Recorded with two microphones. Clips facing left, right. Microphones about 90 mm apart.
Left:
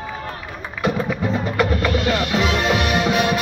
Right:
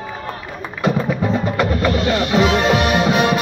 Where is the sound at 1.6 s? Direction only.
25° right (ahead or behind).